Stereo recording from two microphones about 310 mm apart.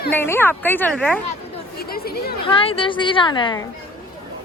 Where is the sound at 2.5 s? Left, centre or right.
Centre.